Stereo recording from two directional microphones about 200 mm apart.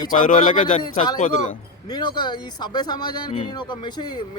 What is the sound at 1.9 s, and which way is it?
Speech, 20° left (ahead or behind).